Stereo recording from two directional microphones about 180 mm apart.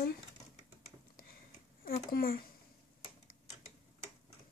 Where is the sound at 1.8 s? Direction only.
50° left (ahead or behind).